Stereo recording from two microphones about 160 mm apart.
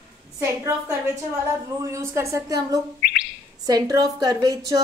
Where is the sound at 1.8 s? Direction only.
15° right (ahead or behind).